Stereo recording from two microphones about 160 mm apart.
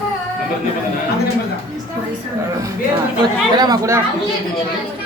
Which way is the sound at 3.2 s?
25° right (ahead or behind).